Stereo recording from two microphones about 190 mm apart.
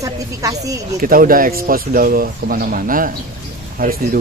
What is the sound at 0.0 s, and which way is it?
Speech, 15° right (ahead or behind).